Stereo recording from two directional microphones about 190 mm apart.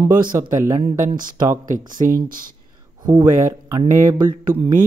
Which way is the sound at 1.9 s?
45° right (ahead or behind).